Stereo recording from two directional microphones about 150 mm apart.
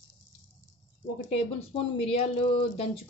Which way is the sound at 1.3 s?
40° left (ahead or behind).